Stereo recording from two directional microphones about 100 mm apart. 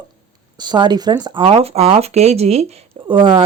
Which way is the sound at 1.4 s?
75° right (ahead or behind).